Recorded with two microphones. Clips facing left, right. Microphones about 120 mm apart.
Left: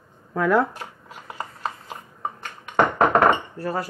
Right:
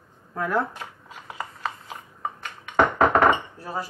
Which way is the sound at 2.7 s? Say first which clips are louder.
Left 1 dB; centre (ahead or behind).